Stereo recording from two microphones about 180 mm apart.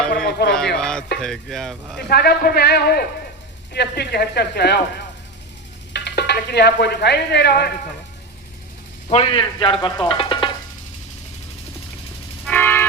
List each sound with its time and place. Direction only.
0.3 s a sound: 65° left (ahead or behind)
0.8 s a sound: 5° left (ahead or behind)
1.2 s speech: centre (ahead or behind)
2.0 s speech: 60° left (ahead or behind)
5.9 s speech: 70° left (ahead or behind)
9.0 s speech: 30° left (ahead or behind)
12.5 s music: 10° left (ahead or behind)